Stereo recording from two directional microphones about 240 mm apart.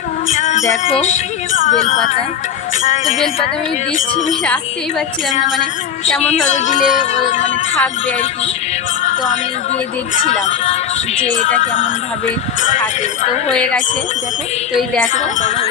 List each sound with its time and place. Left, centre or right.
0.3 s music: left
0.9 s speech: left
4.4 s speech: centre
6.2 s speech: left
10.2 s speech: left
15.1 s speech: left